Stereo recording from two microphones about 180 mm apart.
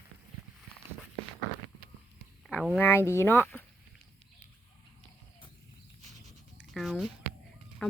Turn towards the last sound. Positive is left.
turn(degrees=5)  # may be behind; listen again after turning